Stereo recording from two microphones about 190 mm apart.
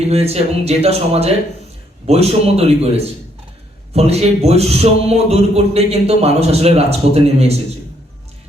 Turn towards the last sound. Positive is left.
turn(degrees=-35)  # may be behind; listen again after turning